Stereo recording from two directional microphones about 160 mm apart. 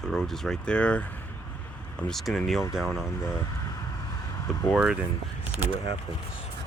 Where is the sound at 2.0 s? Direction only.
Centre (ahead or behind).